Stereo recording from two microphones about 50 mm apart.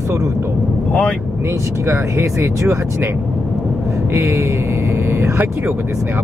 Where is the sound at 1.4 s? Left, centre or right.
Right.